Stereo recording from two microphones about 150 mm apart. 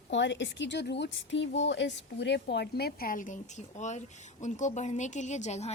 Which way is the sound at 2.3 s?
90° left.